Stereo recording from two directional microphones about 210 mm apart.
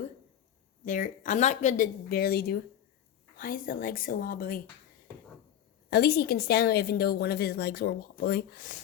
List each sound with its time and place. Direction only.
0.9 s a woman's voice: 40° left (ahead or behind)
5.9 s a woman's voice: 50° left (ahead or behind)